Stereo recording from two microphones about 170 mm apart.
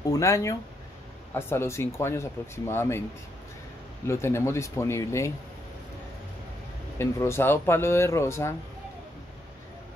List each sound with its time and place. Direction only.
0.1 s speech: 20° left (ahead or behind)
4.1 s speech: 15° left (ahead or behind)
7.0 s speech: 15° left (ahead or behind)